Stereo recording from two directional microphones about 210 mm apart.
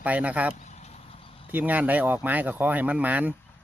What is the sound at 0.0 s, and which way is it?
Speech, 5° right (ahead or behind).